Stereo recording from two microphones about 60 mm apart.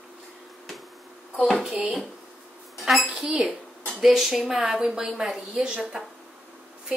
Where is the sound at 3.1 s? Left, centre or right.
Centre.